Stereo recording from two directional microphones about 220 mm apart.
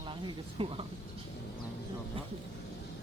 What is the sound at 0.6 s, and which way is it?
Speech, 25° right (ahead or behind).